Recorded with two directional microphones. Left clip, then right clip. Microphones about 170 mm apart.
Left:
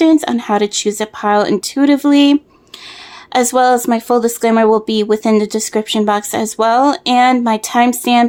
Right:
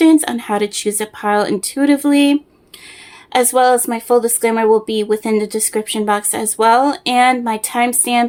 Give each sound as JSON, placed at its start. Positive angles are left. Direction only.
{"t": 0.0, "sound": "speech", "side_deg": 20}